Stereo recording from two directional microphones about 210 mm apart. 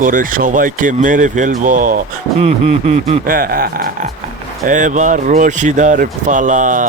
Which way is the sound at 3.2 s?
45° right (ahead or behind).